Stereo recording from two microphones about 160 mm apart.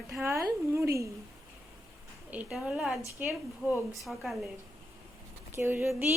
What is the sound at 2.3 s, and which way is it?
A woman's voice, 5° right (ahead or behind).